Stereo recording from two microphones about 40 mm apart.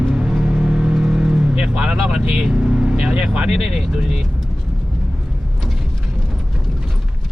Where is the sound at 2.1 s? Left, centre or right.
Centre.